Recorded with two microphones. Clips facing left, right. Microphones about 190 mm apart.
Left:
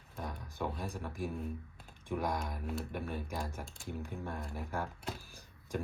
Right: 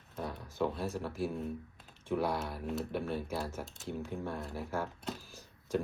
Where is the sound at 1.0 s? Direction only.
15° left (ahead or behind).